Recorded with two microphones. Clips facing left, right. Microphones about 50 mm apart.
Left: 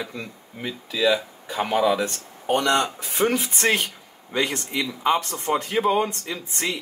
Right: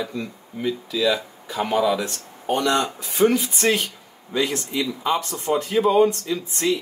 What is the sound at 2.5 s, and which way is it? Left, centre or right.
Speech, left.